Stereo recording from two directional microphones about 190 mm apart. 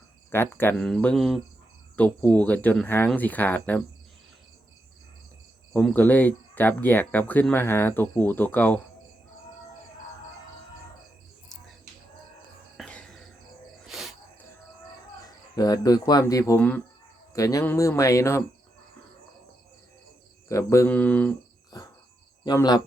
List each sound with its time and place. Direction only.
0.3 s speech: 10° left (ahead or behind)
5.7 s speech: 10° left (ahead or behind)
12.7 s whispering: 5° left (ahead or behind)
13.8 s cricket: centre (ahead or behind)
15.5 s speech: 20° left (ahead or behind)
20.5 s speech: 15° left (ahead or behind)
22.4 s speech: 20° left (ahead or behind)